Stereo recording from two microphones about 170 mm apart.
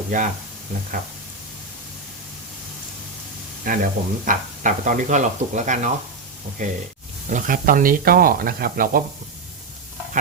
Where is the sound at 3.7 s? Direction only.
55° right (ahead or behind).